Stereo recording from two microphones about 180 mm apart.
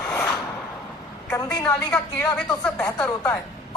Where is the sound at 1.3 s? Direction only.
15° left (ahead or behind).